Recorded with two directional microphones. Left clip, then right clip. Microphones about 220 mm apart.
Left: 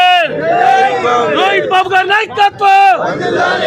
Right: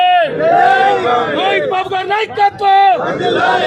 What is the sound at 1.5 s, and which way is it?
A man's voice, 25° left (ahead or behind).